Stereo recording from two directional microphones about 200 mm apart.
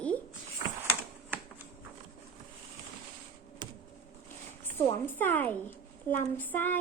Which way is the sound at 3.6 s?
20° right (ahead or behind).